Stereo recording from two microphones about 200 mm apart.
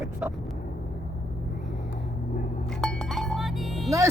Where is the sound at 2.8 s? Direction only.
Centre (ahead or behind).